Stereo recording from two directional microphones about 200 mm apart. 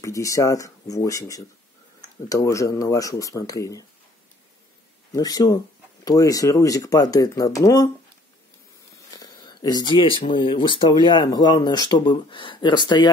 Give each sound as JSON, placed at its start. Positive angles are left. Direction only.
{"t": 0.0, "sound": "speech", "side_deg": 15}
{"t": 5.1, "sound": "speech", "side_deg": 20}
{"t": 9.1, "sound": "speech", "side_deg": 20}